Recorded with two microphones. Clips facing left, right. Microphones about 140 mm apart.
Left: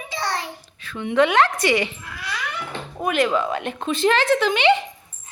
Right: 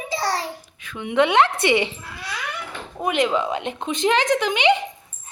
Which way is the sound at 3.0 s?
20° right (ahead or behind).